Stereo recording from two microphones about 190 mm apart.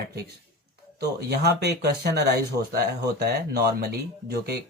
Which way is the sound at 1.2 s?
60° right (ahead or behind).